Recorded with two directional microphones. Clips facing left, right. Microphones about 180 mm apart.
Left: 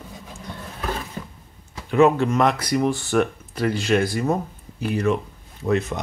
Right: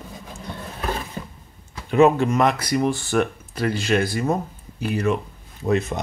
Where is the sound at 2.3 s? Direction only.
Centre (ahead or behind).